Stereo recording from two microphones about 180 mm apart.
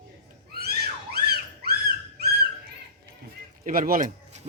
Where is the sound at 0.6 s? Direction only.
60° right (ahead or behind).